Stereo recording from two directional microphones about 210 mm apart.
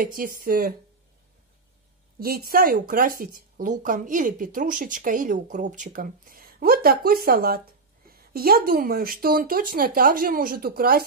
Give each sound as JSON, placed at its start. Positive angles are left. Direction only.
{"t": 0.0, "sound": "speech", "side_deg": -40}
{"t": 2.1, "sound": "speech", "side_deg": -45}